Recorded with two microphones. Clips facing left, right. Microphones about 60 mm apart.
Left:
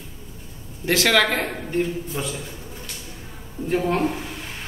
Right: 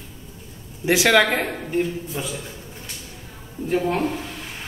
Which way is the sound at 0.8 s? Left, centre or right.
Centre.